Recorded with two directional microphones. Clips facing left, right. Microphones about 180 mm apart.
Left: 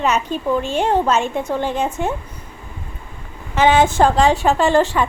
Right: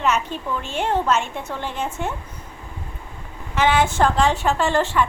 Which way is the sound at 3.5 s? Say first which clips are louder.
Left 5 dB; 20° left (ahead or behind).